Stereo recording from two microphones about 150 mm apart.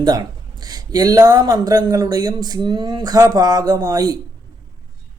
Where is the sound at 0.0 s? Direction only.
25° right (ahead or behind).